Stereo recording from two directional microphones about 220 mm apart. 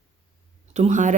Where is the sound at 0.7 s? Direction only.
35° right (ahead or behind).